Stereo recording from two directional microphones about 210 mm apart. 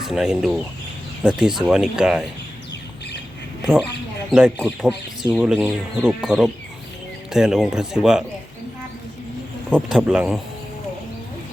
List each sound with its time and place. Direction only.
0.0 s speech: centre (ahead or behind)
4.3 s speech: 5° right (ahead or behind)
9.6 s speech: 5° right (ahead or behind)